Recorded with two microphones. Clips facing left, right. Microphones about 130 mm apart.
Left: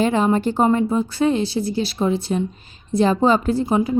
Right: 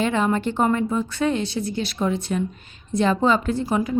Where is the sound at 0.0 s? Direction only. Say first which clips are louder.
Left 4 dB; 35° left (ahead or behind).